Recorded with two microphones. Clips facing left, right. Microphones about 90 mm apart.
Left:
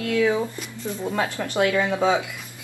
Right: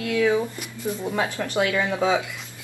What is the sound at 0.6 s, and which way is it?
Speech, 10° right (ahead or behind).